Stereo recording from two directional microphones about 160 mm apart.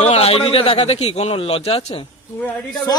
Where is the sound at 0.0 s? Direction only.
40° left (ahead or behind).